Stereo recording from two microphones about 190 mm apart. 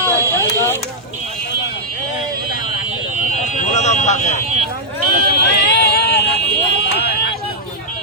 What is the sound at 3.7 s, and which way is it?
Vehicle, 35° left (ahead or behind).